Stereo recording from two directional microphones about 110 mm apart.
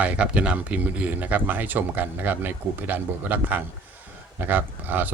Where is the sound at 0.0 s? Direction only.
10° right (ahead or behind).